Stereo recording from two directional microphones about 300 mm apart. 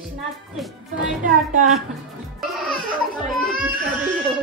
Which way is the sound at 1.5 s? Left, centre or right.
Right.